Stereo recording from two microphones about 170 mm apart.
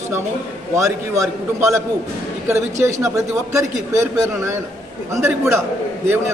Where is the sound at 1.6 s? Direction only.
15° right (ahead or behind).